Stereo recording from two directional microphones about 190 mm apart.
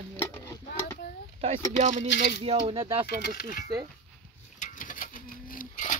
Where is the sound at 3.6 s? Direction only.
20° right (ahead or behind).